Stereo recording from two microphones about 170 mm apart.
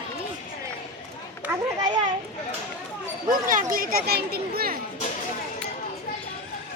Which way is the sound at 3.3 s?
55° right (ahead or behind).